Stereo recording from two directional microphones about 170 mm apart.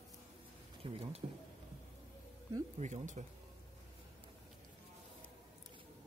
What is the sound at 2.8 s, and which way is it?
Speech, 45° right (ahead or behind).